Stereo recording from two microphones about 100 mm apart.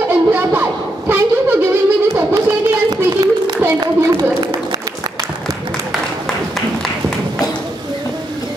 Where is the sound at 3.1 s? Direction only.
50° right (ahead or behind).